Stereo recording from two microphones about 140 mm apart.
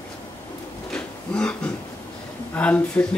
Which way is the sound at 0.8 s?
5° left (ahead or behind).